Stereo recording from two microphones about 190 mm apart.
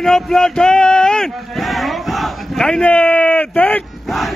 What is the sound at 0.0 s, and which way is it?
Speech, 5° left (ahead or behind).